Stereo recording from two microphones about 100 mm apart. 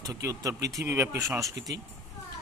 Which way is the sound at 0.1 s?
35° right (ahead or behind).